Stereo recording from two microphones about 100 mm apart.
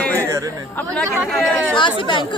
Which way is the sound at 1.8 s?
55° left (ahead or behind).